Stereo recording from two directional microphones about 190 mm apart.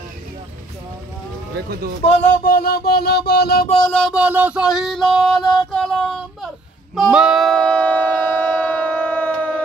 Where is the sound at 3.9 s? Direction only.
5° left (ahead or behind).